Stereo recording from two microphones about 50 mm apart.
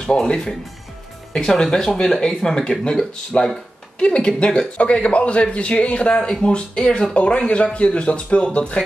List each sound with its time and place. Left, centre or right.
0.3 s speech: centre